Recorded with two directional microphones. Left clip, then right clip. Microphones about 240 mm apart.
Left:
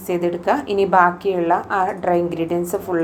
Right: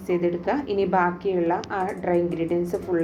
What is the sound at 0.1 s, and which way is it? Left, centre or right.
A woman's voice, centre.